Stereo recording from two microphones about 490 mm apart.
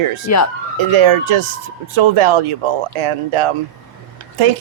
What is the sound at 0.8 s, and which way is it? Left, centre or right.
Speech, right.